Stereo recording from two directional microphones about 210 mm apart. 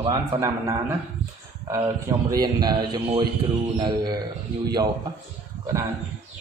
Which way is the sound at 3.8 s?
20° right (ahead or behind).